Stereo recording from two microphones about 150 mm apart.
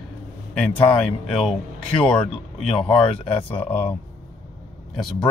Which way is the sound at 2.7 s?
35° left (ahead or behind).